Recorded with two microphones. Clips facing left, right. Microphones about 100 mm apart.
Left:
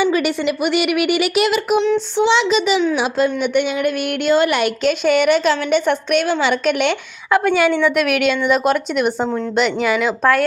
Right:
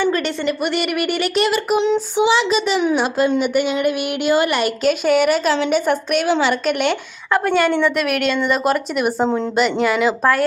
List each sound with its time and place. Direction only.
0.0 s speech: 10° left (ahead or behind)
1.8 s child singing: 15° right (ahead or behind)
2.3 s speech: centre (ahead or behind)
9.2 s a woman's voice: 20° right (ahead or behind)
9.6 s speech: centre (ahead or behind)